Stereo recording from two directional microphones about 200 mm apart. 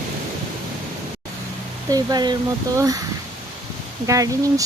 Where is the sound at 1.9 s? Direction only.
15° right (ahead or behind).